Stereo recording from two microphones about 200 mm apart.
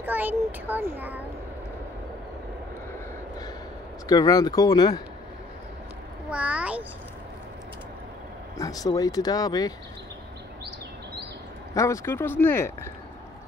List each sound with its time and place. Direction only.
0.0 s a child's voice: 10° right (ahead or behind)
4.1 s speech: 20° left (ahead or behind)
6.3 s a child's voice: 5° right (ahead or behind)
8.5 s speech: 15° left (ahead or behind)
11.7 s speech: 15° left (ahead or behind)